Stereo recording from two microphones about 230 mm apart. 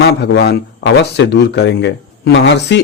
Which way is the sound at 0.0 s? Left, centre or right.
Left.